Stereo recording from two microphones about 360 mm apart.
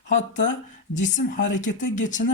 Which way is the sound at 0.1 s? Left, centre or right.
Centre.